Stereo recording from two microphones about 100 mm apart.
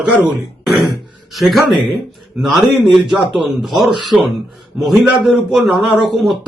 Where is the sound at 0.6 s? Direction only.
Centre (ahead or behind).